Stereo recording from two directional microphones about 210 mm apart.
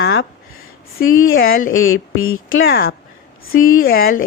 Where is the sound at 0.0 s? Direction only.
55° left (ahead or behind).